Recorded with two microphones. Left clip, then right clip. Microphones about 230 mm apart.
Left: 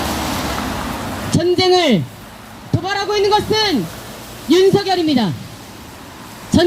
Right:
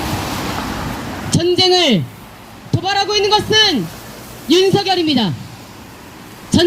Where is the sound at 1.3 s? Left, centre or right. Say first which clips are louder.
Right 1 dB; right.